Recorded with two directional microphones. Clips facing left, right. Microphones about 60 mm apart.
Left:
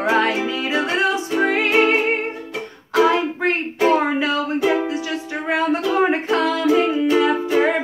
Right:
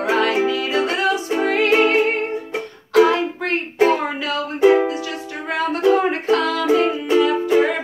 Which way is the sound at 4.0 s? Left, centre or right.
Left.